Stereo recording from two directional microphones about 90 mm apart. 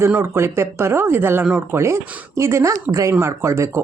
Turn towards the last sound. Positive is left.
turn(degrees=-30)  # may be behind; listen again after turning